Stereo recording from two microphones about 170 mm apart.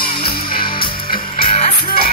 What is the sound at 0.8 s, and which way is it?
Music, 60° left (ahead or behind).